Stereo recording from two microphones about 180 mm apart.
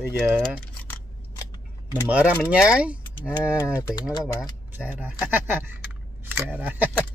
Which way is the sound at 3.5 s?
15° left (ahead or behind).